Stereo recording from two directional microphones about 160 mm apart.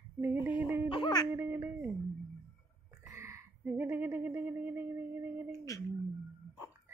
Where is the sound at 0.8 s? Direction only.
30° left (ahead or behind).